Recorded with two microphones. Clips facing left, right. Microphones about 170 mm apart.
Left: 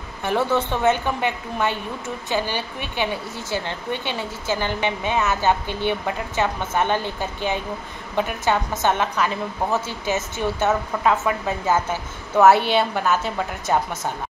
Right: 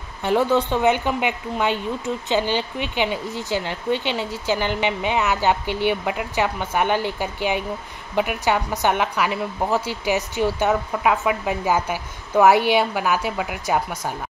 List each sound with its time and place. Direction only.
0.2 s speech: 15° right (ahead or behind)